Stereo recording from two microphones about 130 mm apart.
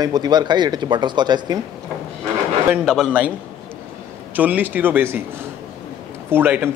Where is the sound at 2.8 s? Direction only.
Centre (ahead or behind).